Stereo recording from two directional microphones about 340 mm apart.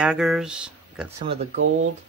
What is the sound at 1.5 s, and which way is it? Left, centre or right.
Speech, right.